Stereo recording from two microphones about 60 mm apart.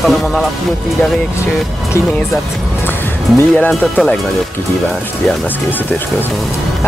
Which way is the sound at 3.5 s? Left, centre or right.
Left.